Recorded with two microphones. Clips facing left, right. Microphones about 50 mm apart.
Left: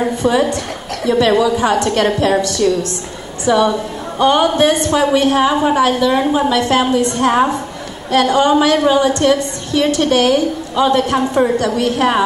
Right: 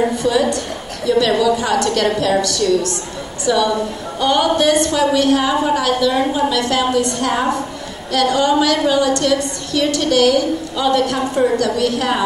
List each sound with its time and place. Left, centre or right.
0.2 s a woman's voice: left